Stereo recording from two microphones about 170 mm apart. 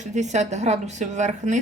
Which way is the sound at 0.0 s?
45° right (ahead or behind).